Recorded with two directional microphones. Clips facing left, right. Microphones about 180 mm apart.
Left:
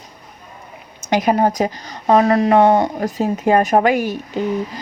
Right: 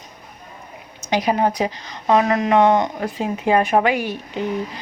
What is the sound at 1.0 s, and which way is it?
Speech, 50° left (ahead or behind).